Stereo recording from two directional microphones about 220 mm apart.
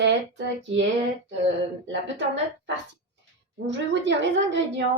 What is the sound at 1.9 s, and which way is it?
A woman's voice, 55° right (ahead or behind).